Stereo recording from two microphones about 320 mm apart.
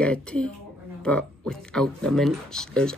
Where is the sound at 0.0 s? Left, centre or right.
Centre.